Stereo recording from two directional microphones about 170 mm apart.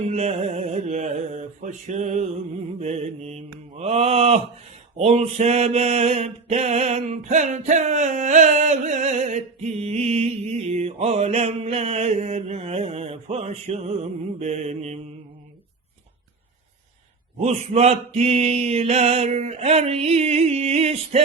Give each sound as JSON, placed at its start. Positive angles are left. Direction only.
{"t": 0.0, "sound": "mantra", "side_deg": -40}
{"t": 17.4, "sound": "mantra", "side_deg": -40}